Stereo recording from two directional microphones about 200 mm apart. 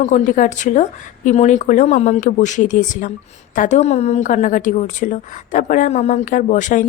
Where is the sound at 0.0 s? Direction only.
35° left (ahead or behind).